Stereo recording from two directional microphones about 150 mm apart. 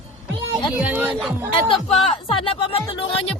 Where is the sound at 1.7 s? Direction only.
35° left (ahead or behind).